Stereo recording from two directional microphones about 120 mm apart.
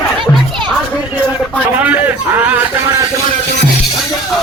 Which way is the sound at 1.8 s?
15° right (ahead or behind).